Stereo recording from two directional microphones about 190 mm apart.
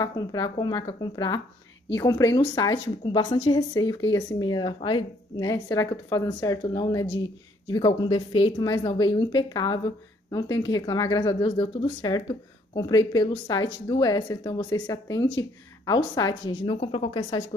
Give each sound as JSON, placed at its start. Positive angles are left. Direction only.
{"t": 0.0, "sound": "a woman's voice", "side_deg": 20}